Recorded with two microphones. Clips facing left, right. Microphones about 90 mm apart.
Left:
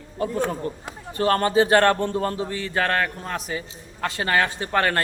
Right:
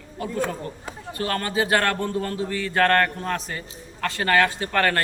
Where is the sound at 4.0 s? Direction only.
20° left (ahead or behind).